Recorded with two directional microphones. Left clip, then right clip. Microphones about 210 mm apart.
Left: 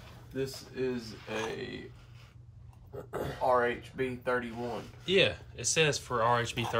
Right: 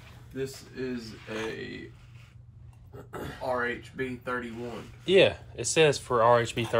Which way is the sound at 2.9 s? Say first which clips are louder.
Left 2 dB; 45° left (ahead or behind).